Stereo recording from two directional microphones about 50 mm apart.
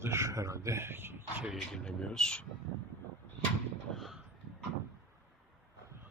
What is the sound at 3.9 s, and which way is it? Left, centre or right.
Vehicle, centre.